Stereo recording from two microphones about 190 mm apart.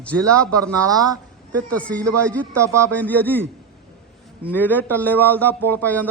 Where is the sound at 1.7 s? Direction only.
5° left (ahead or behind).